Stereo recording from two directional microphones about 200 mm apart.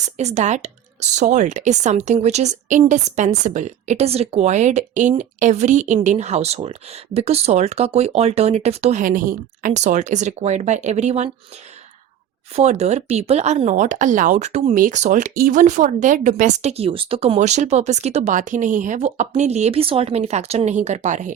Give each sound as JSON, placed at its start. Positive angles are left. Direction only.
{"t": 0.0, "sound": "speech", "side_deg": -35}
{"t": 12.5, "sound": "speech", "side_deg": -35}